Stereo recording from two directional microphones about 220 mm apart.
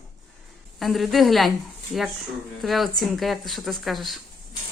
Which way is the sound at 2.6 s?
Centre (ahead or behind).